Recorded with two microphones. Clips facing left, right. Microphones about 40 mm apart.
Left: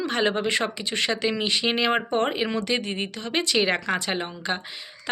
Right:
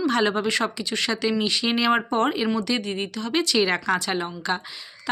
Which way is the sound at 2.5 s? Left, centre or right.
Left.